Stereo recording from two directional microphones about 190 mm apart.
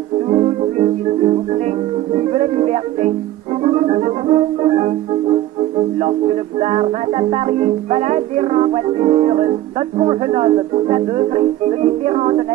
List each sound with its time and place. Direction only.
0.3 s music: 35° right (ahead or behind)